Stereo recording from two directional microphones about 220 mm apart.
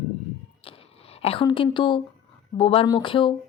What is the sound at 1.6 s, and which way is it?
A woman's voice, 20° left (ahead or behind).